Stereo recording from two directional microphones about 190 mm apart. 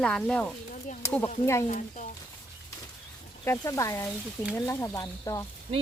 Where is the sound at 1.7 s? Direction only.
40° left (ahead or behind).